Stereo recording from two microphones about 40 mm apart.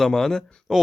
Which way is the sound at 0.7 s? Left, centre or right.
Centre.